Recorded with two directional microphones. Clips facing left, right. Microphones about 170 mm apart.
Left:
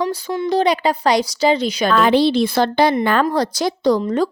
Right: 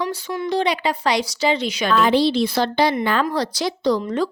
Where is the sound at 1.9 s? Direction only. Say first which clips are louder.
Left 2 dB; 55° left (ahead or behind).